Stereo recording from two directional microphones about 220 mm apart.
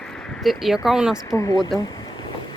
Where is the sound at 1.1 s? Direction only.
15° left (ahead or behind).